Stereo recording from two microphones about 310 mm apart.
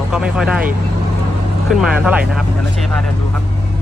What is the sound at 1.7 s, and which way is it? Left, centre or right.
Speech, centre.